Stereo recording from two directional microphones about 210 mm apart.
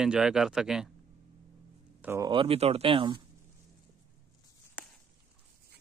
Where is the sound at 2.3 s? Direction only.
25° right (ahead or behind).